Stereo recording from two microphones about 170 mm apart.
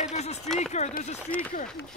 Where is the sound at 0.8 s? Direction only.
40° left (ahead or behind).